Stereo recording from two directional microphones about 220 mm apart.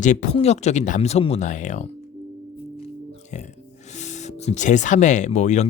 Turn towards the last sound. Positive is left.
turn(degrees=30)  # may be behind; listen again after turning